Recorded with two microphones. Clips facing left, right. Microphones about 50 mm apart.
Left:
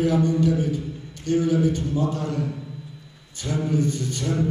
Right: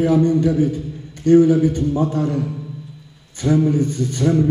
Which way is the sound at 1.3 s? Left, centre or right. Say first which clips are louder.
Right 8 dB; right.